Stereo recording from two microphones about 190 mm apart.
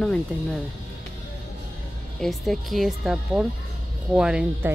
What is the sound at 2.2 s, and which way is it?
Speech, centre (ahead or behind).